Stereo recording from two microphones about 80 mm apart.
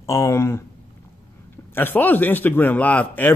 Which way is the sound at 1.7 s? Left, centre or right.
Left.